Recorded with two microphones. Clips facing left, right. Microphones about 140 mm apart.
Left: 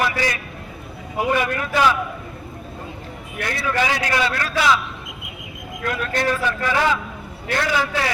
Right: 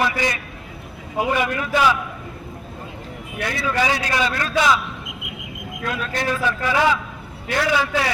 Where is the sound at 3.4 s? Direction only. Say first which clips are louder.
Even; 10° right (ahead or behind).